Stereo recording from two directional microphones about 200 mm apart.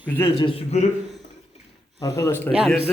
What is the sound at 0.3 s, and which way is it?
Speech, 30° left (ahead or behind).